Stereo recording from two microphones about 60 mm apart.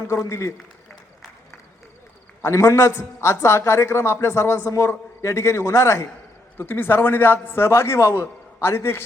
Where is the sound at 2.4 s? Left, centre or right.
Left.